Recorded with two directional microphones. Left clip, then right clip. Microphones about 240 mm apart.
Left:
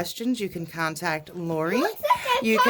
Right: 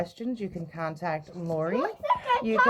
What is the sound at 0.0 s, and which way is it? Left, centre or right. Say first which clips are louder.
Speech: left 5 dB; left.